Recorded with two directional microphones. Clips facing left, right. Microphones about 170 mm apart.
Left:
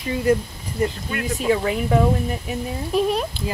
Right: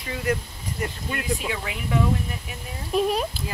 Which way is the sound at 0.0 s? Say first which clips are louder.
Left 7 dB; 25° left (ahead or behind).